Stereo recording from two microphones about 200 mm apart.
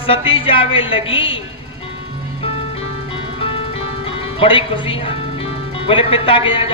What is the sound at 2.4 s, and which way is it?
Ice cream truck, 30° left (ahead or behind).